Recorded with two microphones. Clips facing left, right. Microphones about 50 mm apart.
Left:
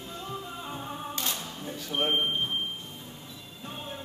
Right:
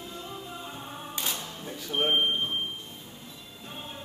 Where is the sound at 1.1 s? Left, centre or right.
Centre.